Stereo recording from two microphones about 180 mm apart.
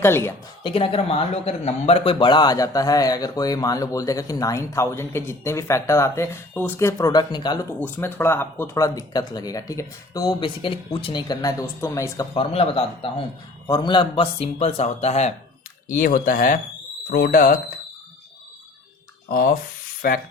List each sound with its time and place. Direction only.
0.0 s speech: 15° left (ahead or behind)
0.6 s speech: 30° left (ahead or behind)
7.8 s speech: 10° left (ahead or behind)
12.4 s speech: 30° left (ahead or behind)
15.9 s speech: 50° left (ahead or behind)
19.3 s speech: 55° left (ahead or behind)